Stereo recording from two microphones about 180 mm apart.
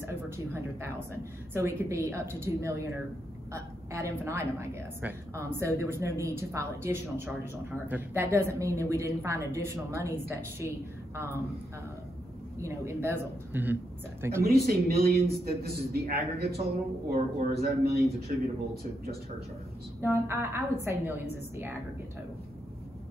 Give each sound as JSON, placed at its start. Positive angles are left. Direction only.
{"t": 0.0, "sound": "a woman's voice", "side_deg": -15}
{"t": 12.5, "sound": "a woman's voice", "side_deg": -15}
{"t": 14.4, "sound": "a man's voice", "side_deg": -60}
{"t": 20.0, "sound": "a woman's voice", "side_deg": -15}